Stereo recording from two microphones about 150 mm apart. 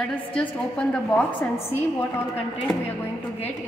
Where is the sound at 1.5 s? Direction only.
15° left (ahead or behind).